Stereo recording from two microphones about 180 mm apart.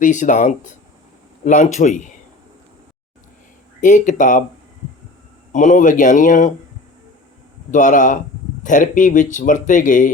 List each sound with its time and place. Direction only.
0.0 s speech: 45° left (ahead or behind)
3.8 s speech: 45° left (ahead or behind)
5.5 s speech: 45° left (ahead or behind)
7.7 s speech: 45° left (ahead or behind)